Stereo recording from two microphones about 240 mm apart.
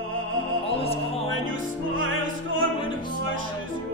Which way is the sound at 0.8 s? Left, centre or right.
Left.